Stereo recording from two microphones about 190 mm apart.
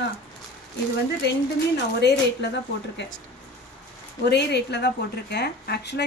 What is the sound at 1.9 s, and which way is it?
Speech, 60° left (ahead or behind).